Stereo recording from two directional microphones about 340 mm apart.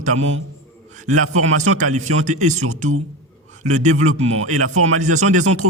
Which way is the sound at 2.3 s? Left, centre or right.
Right.